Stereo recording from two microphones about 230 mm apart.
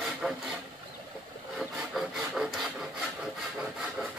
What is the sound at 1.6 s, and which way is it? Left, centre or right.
Rub, centre.